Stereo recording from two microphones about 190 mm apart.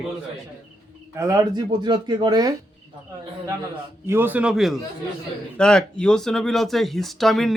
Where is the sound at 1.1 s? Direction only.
15° right (ahead or behind).